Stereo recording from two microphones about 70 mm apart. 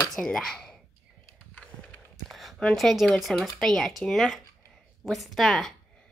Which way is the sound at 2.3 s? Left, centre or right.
Centre.